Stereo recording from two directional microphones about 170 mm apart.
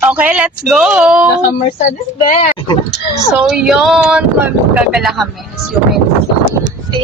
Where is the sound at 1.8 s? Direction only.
45° left (ahead or behind).